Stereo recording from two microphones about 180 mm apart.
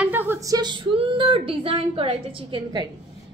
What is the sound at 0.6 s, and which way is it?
A woman's voice, 25° right (ahead or behind).